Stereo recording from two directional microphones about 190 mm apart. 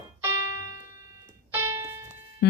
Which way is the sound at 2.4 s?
60° left (ahead or behind).